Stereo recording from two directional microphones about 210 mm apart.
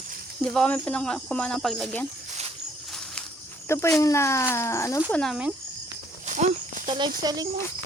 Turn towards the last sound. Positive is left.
turn(degrees=-20)  # may be behind; listen again after turning